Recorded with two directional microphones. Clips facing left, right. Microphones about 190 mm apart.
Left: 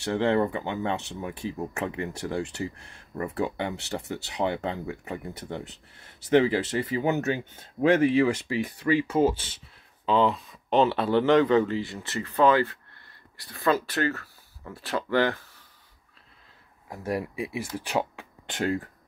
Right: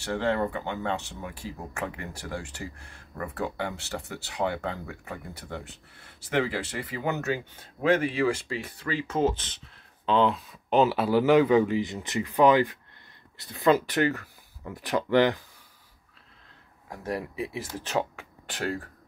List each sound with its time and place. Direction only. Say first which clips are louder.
0.0 s speech: left 3 dB; 20° left (ahead or behind); by 15.4 s 15° right (ahead or behind)
16.9 s speech: left 2 dB; 10° left (ahead or behind)